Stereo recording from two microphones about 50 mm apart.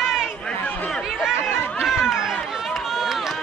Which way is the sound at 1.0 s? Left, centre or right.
Centre.